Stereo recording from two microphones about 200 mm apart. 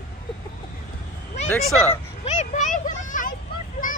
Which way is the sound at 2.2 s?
35° left (ahead or behind).